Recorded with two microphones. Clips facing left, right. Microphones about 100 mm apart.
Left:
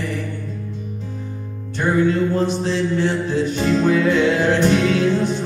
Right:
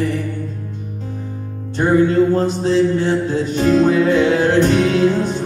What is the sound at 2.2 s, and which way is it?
Music, 40° right (ahead or behind).